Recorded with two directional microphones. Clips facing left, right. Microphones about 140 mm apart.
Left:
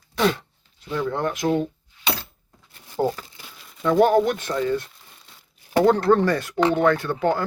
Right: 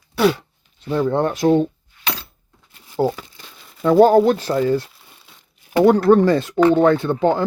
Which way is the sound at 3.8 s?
35° right (ahead or behind).